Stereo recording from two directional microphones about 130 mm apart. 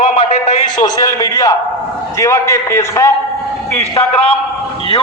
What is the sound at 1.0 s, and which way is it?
A man's voice, 30° left (ahead or behind).